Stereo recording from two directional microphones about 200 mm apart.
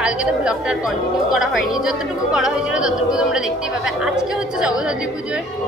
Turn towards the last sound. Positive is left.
turn(degrees=-5)  # may be behind; listen again after turning